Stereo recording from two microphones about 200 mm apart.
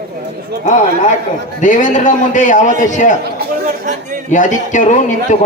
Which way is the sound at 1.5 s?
40° left (ahead or behind).